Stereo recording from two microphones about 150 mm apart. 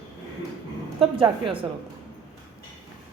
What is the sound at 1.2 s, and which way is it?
Speech, 35° right (ahead or behind).